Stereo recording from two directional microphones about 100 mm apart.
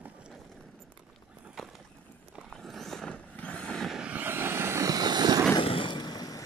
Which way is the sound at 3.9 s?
15° right (ahead or behind).